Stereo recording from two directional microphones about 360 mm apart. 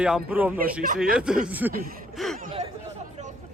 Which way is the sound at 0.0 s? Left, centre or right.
Centre.